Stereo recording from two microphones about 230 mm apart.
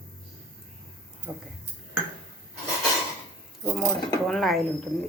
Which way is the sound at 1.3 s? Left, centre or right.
Centre.